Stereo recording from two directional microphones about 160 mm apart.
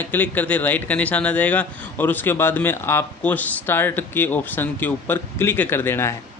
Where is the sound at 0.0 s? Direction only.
10° left (ahead or behind).